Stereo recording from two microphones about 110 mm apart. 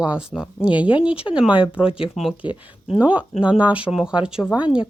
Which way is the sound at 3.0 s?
15° right (ahead or behind).